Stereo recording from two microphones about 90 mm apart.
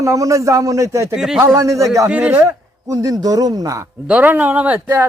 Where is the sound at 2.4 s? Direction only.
40° right (ahead or behind).